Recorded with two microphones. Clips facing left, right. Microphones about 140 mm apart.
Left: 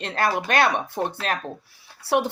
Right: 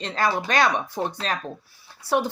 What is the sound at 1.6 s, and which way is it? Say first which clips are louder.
Speech: right 1 dB; 75° left (ahead or behind).